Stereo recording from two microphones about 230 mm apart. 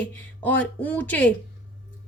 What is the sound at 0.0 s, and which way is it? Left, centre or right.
A woman's voice, centre.